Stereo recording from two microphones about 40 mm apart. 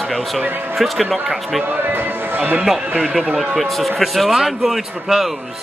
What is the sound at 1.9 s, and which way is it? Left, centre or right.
Speech, right.